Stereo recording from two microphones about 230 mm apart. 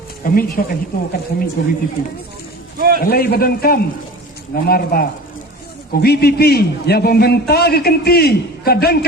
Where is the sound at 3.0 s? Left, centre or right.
Left.